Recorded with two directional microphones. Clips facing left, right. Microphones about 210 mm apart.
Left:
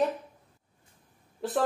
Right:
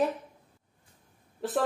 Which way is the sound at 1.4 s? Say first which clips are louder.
Even; centre (ahead or behind).